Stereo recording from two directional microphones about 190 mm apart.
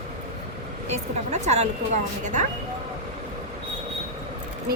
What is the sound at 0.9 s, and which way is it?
Speech, 35° right (ahead or behind).